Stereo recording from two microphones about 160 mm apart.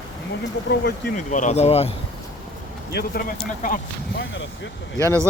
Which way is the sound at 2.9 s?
70° left (ahead or behind).